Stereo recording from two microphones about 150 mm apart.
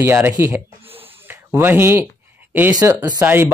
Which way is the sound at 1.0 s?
15° right (ahead or behind).